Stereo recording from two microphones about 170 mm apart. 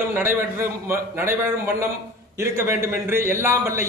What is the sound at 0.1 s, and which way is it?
A man's voice, 15° right (ahead or behind).